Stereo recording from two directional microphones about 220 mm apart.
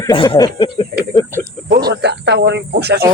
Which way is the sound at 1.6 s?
50° right (ahead or behind).